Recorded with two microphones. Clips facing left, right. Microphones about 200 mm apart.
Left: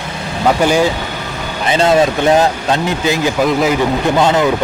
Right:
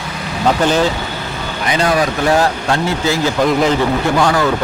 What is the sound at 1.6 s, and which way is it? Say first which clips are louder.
Speech: left 4 dB; 25° left (ahead or behind).